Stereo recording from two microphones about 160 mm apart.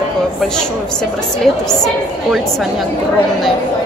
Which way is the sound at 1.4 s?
Centre (ahead or behind).